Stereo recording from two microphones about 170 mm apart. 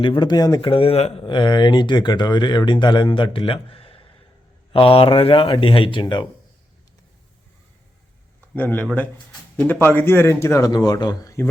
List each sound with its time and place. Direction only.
0.0 s speech: 30° left (ahead or behind)
8.5 s a man's voice: 10° left (ahead or behind)